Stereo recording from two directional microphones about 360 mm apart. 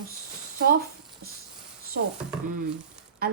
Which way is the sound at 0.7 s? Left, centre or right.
Right.